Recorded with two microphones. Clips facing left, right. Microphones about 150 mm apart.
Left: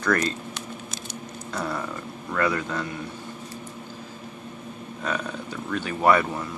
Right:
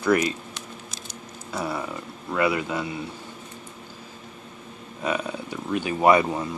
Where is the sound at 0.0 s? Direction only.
10° right (ahead or behind).